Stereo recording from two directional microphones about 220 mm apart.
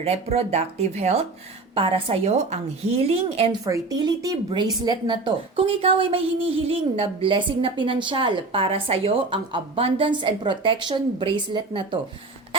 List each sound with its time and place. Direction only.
0.0 s speech: 30° right (ahead or behind)
3.6 s speech: 15° right (ahead or behind)